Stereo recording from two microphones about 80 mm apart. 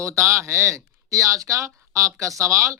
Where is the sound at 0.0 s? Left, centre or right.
Right.